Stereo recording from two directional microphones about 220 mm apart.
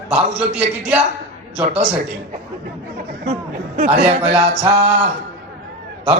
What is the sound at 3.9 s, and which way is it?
Music, 30° right (ahead or behind).